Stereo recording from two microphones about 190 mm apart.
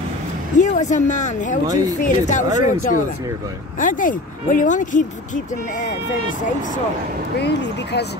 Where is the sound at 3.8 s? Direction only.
45° left (ahead or behind).